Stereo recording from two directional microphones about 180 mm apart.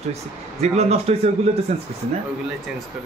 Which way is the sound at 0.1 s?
35° right (ahead or behind).